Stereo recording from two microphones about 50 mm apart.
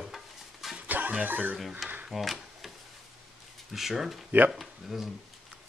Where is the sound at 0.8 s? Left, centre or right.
Right.